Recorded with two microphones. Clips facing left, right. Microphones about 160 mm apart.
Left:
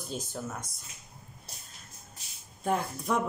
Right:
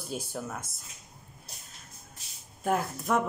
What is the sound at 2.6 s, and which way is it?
Speech, 5° right (ahead or behind).